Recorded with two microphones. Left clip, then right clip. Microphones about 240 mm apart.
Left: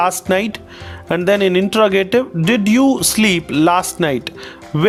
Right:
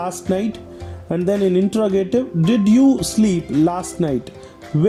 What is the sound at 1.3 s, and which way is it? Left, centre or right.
Speech, left.